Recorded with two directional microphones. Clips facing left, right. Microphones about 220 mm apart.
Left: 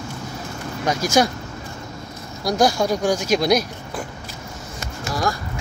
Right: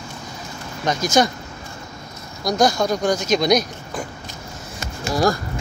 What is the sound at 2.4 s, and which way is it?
Speech, 10° left (ahead or behind).